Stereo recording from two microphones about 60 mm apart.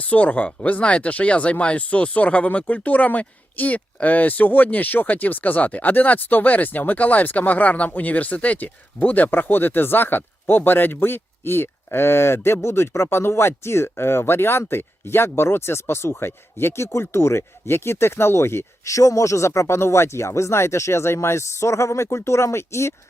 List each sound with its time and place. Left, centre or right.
0.0 s speech: left
18.9 s speech: left